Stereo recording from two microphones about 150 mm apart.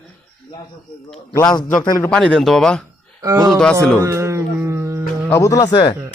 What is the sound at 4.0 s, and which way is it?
Music, 20° right (ahead or behind).